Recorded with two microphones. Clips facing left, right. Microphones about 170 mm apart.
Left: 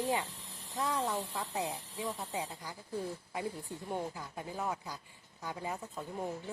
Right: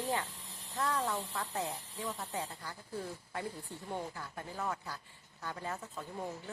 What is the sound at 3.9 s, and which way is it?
Speech, 15° left (ahead or behind).